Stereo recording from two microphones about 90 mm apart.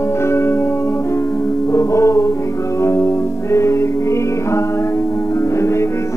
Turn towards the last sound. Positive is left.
turn(degrees=30)  # may be behind; listen again after turning